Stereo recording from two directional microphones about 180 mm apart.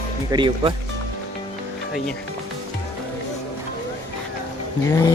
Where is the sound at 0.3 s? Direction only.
25° right (ahead or behind).